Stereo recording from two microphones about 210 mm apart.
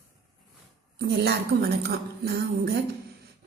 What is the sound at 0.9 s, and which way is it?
A woman's voice, 50° right (ahead or behind).